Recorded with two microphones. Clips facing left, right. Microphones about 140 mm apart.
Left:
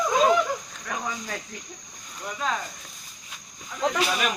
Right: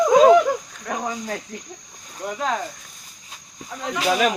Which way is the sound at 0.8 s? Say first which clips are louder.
Right 6 dB; 40° right (ahead or behind).